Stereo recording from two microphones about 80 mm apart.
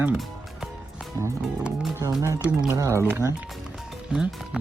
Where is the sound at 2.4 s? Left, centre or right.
Centre.